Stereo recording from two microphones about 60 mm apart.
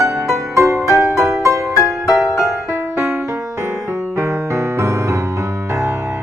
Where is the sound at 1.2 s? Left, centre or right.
Right.